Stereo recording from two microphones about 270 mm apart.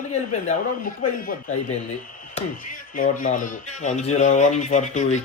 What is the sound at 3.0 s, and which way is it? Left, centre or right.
Speech, left.